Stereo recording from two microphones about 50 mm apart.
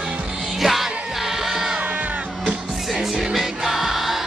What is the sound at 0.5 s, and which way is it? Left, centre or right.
Music, centre.